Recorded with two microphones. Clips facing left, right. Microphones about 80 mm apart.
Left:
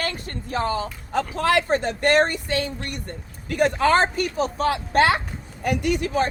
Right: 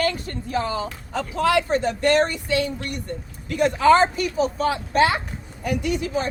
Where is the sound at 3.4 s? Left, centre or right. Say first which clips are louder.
Right 3 dB; left.